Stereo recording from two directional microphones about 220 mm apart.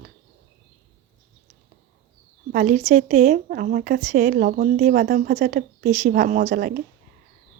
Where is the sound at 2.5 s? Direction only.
35° right (ahead or behind).